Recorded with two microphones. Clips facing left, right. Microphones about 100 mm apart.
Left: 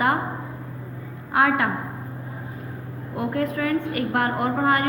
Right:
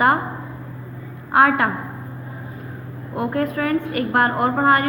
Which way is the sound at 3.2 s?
50° right (ahead or behind).